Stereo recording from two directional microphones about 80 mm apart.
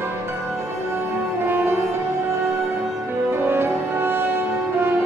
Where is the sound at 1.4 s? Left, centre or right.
Right.